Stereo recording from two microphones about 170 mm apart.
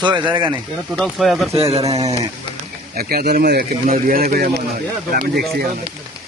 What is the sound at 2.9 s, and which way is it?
Speech, 60° right (ahead or behind).